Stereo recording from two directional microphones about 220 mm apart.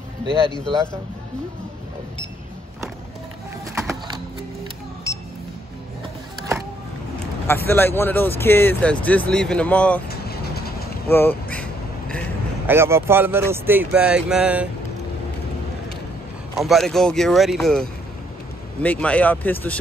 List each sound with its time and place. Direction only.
7.4 s speech: 10° left (ahead or behind)
10.0 s vehicle: 45° left (ahead or behind)
11.1 s speech: 10° left (ahead or behind)
12.6 s speech: 10° right (ahead or behind)
16.5 s speech: centre (ahead or behind)